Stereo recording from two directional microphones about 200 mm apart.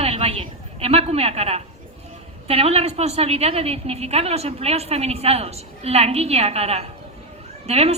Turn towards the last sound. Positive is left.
turn(degrees=-30)  # may be behind; listen again after turning